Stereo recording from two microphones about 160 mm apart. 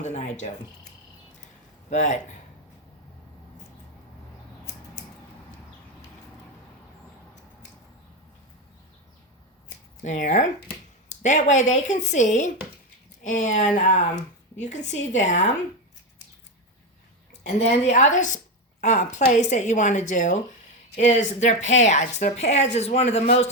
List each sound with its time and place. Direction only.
0.0 s cricket: 50° left (ahead or behind)
1.9 s speech: 50° left (ahead or behind)
10.0 s a woman's voice: 55° left (ahead or behind)
17.4 s a woman's voice: 45° left (ahead or behind)